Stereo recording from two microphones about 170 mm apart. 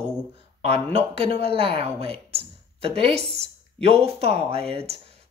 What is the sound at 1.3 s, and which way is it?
A woman's voice, 35° right (ahead or behind).